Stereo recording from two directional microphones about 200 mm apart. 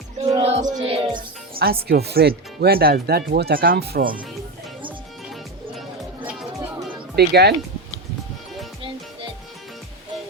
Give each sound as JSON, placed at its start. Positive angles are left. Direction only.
{"t": 0.3, "sound": "music", "side_deg": -30}
{"t": 1.6, "sound": "speech", "side_deg": -50}
{"t": 4.9, "sound": "music", "side_deg": 0}
{"t": 7.2, "sound": "speech", "side_deg": -55}